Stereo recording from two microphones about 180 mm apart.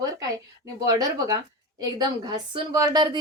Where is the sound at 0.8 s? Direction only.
20° right (ahead or behind).